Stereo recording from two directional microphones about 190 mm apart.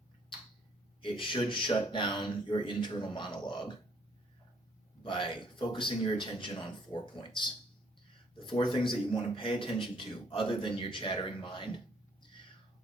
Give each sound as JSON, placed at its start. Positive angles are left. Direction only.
{"t": 1.0, "sound": "a man's voice", "side_deg": 25}
{"t": 5.0, "sound": "a man's voice", "side_deg": 25}